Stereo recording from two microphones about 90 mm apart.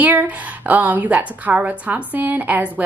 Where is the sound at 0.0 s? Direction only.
20° right (ahead or behind).